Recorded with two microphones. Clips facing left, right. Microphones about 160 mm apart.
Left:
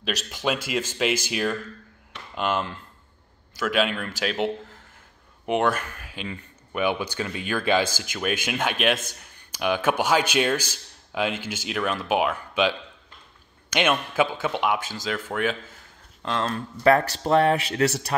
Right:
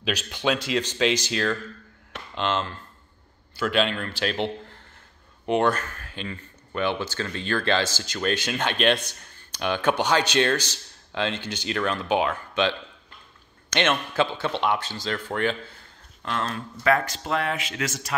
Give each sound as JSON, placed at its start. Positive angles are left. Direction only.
{"t": 0.0, "sound": "speech", "side_deg": 0}
{"t": 16.3, "sound": "speech", "side_deg": 25}
{"t": 16.5, "sound": "speech", "side_deg": 35}